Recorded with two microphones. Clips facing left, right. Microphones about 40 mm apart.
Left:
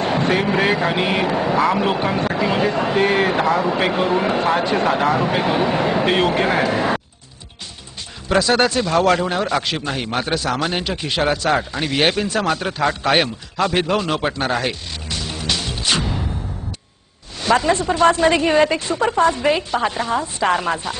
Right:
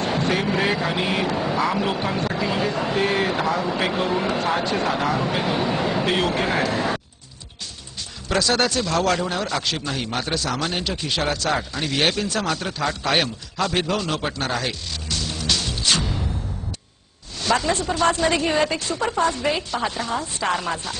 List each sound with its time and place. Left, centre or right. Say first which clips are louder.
0.0 s a woman's voice: left 4 dB; centre
8.3 s a man's voice: left 4 dB; left
17.4 s a woman's voice: left 5 dB; centre